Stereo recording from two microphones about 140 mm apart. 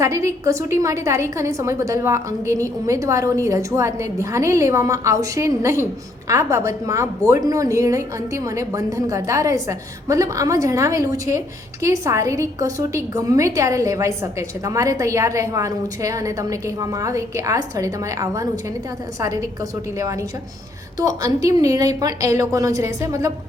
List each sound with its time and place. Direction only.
0.0 s a woman's voice: 20° right (ahead or behind)